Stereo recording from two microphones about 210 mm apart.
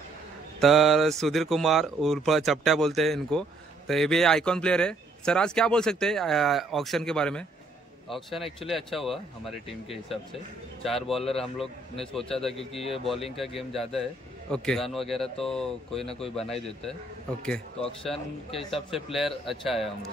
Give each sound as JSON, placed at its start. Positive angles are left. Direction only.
{"t": 0.6, "sound": "speech", "side_deg": 0}
{"t": 12.5, "sound": "speech", "side_deg": 30}
{"t": 12.9, "sound": "speech", "side_deg": 0}
{"t": 18.9, "sound": "speech", "side_deg": 0}